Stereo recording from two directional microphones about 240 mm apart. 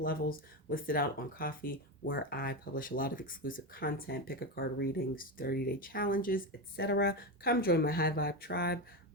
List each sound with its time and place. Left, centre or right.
0.0 s speech: left